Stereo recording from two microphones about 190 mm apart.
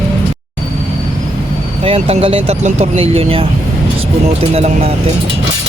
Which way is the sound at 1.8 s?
30° right (ahead or behind).